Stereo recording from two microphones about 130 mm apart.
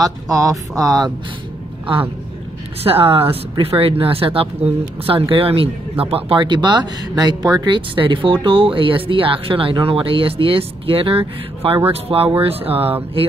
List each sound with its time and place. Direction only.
0.0 s speech: 25° right (ahead or behind)
2.8 s speech: 45° right (ahead or behind)